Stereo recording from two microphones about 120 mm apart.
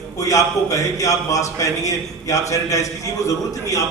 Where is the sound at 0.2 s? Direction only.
30° left (ahead or behind).